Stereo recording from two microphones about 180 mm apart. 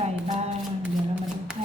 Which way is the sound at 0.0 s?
40° right (ahead or behind).